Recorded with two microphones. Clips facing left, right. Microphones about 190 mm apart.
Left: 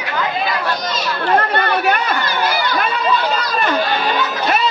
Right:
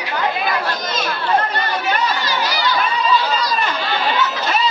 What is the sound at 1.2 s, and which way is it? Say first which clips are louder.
Chatter: left 4 dB; 60° left (ahead or behind).